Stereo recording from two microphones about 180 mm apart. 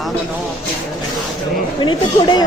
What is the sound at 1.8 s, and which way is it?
Speech, 25° left (ahead or behind).